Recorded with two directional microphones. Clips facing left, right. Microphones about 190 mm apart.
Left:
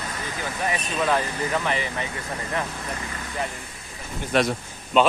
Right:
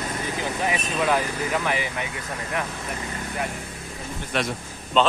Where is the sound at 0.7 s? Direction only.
10° right (ahead or behind).